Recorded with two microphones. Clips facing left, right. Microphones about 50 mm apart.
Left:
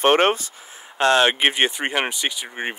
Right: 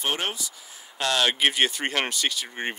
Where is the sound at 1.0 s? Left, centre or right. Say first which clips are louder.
Left 6 dB; left; by 2.7 s centre.